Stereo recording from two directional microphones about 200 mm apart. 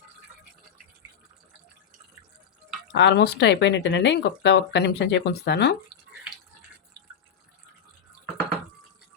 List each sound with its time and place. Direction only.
2.9 s speech: 60° left (ahead or behind)